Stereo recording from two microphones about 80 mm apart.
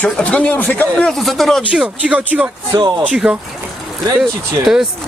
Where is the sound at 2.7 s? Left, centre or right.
Right.